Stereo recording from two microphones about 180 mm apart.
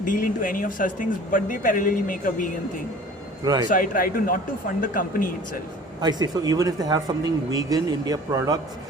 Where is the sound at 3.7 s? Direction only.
50° left (ahead or behind).